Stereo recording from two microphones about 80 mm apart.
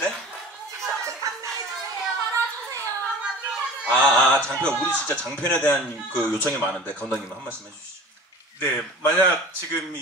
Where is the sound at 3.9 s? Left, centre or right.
Centre.